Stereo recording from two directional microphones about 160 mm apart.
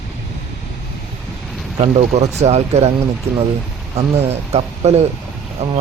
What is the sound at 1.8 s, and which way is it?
Speech, 40° right (ahead or behind).